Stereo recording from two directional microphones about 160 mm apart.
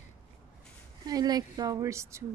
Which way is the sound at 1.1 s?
25° right (ahead or behind).